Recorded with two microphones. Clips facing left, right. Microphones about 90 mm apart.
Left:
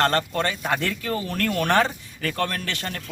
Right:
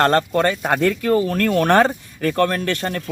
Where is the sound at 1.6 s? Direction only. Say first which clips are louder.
Right 5 dB; 45° right (ahead or behind).